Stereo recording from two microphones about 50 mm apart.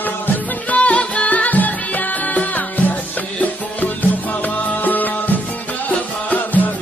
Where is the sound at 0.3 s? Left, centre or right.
Left.